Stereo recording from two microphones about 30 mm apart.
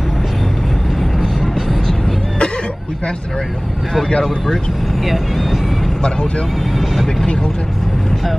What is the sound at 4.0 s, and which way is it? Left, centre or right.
Speech, centre.